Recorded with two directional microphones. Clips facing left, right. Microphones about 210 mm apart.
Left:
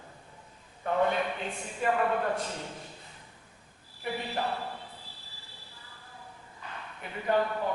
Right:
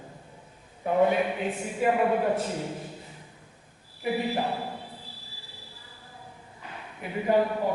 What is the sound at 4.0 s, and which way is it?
Speech, 10° right (ahead or behind).